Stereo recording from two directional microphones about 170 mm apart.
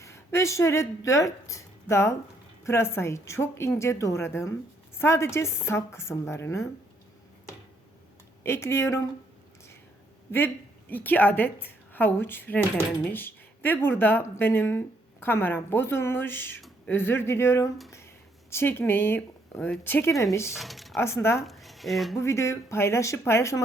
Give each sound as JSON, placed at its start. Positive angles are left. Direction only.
{"t": 0.0, "sound": "a woman's voice", "side_deg": 15}
{"t": 8.4, "sound": "a woman's voice", "side_deg": 15}
{"t": 10.3, "sound": "a woman's voice", "side_deg": 10}
{"t": 16.6, "sound": "a sound", "side_deg": 0}
{"t": 16.9, "sound": "a woman's voice", "side_deg": 15}
{"t": 20.5, "sound": "speech", "side_deg": 0}
{"t": 20.9, "sound": "a woman's voice", "side_deg": 15}
{"t": 21.4, "sound": "speech", "side_deg": 0}
{"t": 22.2, "sound": "a woman's voice", "side_deg": 15}